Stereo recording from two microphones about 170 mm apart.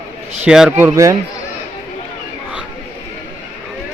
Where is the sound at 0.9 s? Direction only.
20° right (ahead or behind).